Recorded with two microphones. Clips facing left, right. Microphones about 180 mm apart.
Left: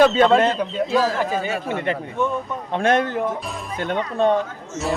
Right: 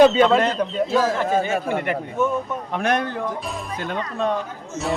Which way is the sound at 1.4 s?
45° right (ahead or behind).